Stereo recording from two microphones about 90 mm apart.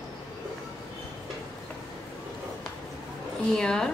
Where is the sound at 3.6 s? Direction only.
5° left (ahead or behind).